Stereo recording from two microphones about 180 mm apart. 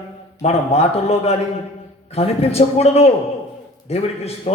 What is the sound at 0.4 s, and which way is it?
A man's voice, 35° left (ahead or behind).